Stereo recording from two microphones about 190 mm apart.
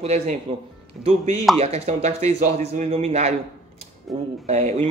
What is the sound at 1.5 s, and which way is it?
Speech, 35° right (ahead or behind).